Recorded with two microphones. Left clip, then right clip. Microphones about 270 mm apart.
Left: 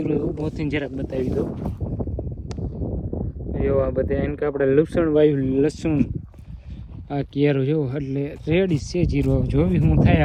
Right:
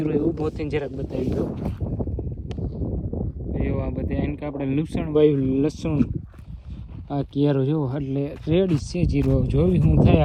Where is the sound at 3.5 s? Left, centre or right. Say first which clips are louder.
Left 8 dB; centre.